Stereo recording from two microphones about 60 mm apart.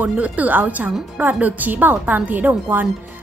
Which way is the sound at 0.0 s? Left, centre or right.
Right.